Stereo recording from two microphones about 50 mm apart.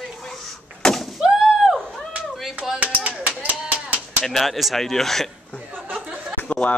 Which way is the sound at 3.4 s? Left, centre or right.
Right.